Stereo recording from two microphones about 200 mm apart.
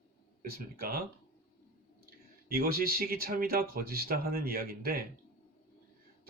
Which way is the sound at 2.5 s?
50° right (ahead or behind).